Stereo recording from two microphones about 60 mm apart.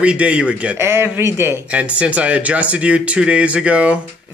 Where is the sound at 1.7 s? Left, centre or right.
Right.